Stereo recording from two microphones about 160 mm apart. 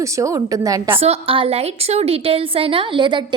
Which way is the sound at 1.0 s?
35° right (ahead or behind).